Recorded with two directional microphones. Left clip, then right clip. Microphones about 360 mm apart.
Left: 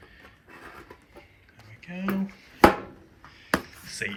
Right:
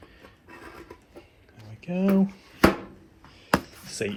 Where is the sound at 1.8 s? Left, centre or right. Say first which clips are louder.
Right 7 dB; right.